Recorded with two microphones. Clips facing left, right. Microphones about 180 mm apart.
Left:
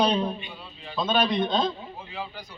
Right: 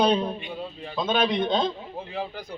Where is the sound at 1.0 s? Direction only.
15° right (ahead or behind).